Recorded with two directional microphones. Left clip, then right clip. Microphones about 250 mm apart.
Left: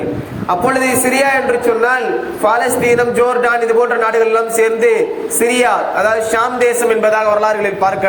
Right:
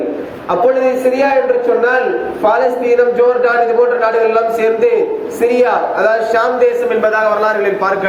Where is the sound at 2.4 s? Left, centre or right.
Left.